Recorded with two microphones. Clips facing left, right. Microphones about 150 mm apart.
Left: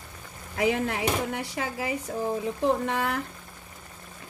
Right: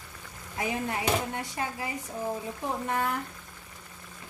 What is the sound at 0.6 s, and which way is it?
Speech, 90° left.